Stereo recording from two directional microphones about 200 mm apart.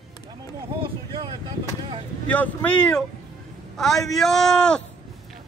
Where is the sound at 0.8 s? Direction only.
25° right (ahead or behind).